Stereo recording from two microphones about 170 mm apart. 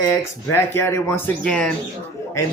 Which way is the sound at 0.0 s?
15° left (ahead or behind).